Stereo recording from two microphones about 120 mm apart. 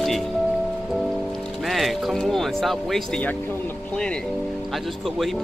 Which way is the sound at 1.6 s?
Centre (ahead or behind).